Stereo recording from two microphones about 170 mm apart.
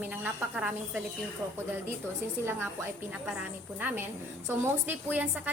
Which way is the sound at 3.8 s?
10° right (ahead or behind).